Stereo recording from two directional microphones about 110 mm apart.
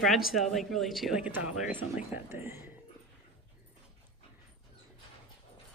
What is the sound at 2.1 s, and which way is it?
Speech, 25° right (ahead or behind).